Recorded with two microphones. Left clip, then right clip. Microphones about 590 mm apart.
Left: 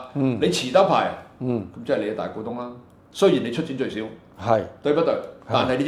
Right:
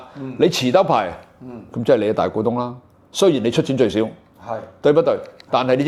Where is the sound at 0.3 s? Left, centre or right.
Right.